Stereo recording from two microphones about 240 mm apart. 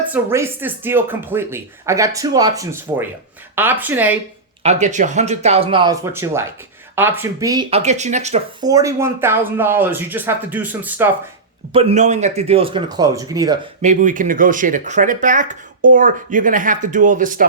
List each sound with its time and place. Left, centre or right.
0.1 s speech: centre
4.6 s speech: right
8.6 s speech: centre
11.7 s speech: right
13.8 s speech: right